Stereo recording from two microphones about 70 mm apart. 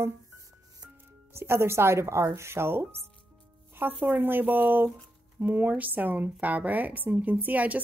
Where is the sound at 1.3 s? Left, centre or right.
Right.